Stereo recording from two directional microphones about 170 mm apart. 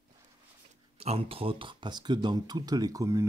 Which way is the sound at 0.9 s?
35° right (ahead or behind).